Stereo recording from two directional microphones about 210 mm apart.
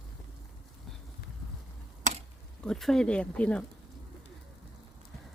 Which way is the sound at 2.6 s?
Centre (ahead or behind).